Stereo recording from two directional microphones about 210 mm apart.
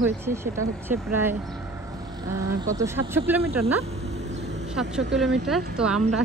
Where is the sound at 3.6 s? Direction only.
30° right (ahead or behind).